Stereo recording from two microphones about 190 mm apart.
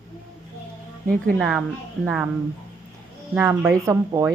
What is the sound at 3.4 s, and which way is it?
Speech, 10° right (ahead or behind).